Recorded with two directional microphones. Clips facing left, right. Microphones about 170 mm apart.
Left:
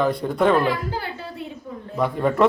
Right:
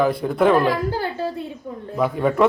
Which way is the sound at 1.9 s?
Centre (ahead or behind).